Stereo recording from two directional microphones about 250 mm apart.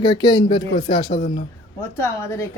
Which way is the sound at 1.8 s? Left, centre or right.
Centre.